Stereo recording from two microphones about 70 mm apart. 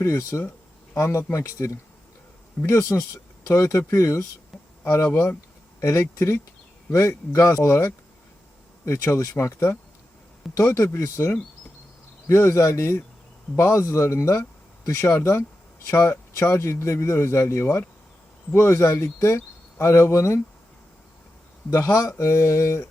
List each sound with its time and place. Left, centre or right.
0.0 s speech: left
4.5 s a sound: centre
5.0 s speech: left
6.0 s speech: left
21.7 s speech: left